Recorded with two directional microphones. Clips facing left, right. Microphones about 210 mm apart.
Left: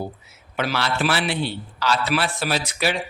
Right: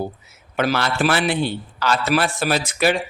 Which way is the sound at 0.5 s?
45° right (ahead or behind).